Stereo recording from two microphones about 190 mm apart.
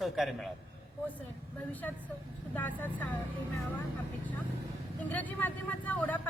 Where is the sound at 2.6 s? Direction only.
10° left (ahead or behind).